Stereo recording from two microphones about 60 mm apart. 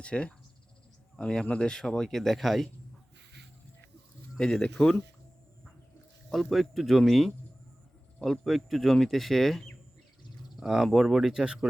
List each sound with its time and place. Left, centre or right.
0.0 s speech: centre
4.4 s speech: centre
6.3 s speech: centre
10.6 s speech: centre